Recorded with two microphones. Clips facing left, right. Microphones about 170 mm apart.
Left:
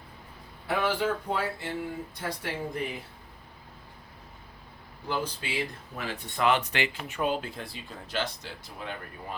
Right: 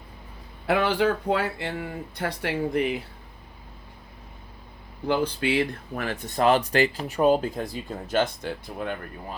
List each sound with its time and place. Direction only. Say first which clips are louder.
0.7 s speech: right 5 dB; 80° right
5.0 s speech: right 8 dB; 65° right (ahead or behind)
6.2 s speech: right 5 dB; 40° right (ahead or behind)